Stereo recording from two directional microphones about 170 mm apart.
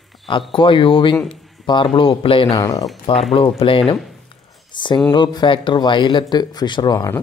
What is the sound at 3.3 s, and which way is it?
Speech, 30° left (ahead or behind).